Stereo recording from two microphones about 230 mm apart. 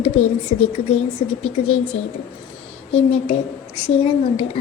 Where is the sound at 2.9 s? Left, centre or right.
Left.